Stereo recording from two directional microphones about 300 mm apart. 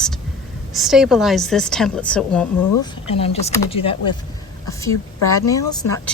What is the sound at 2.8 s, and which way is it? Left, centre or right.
A woman's voice, centre.